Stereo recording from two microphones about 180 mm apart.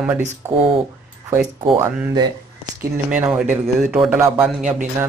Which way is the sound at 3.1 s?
10° right (ahead or behind).